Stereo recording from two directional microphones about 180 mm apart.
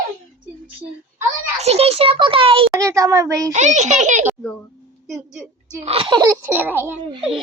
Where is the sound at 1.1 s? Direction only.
35° right (ahead or behind).